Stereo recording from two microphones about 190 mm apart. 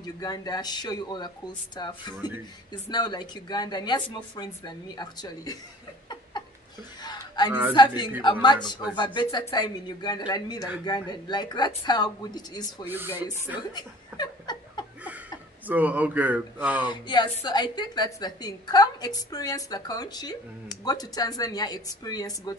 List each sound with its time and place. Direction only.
0.0 s speech: 20° left (ahead or behind)
7.0 s music: 20° left (ahead or behind)
7.7 s speech: 25° left (ahead or behind)
12.8 s speech: 10° right (ahead or behind)
13.6 s chuckle: 20° left (ahead or behind)
15.6 s speech: 10° right (ahead or behind)
16.8 s speech: 25° left (ahead or behind)